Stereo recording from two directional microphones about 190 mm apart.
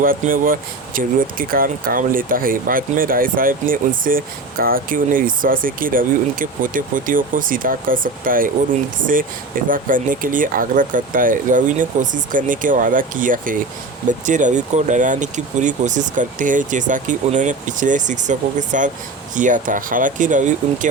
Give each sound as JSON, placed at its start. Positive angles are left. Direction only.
{"t": 0.0, "sound": "speech", "side_deg": -50}
{"t": 9.6, "sound": "speech", "side_deg": -45}